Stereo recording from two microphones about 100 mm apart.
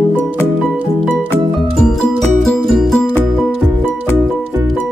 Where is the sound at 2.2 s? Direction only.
5° left (ahead or behind).